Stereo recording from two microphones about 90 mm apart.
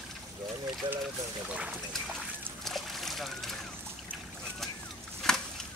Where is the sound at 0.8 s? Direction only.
65° right (ahead or behind).